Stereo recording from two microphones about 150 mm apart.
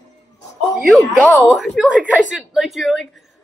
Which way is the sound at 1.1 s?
5° right (ahead or behind).